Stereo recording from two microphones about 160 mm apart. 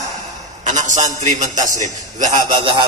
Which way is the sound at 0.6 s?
50° right (ahead or behind).